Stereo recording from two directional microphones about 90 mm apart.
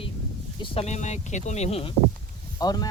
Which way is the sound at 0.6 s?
65° left (ahead or behind).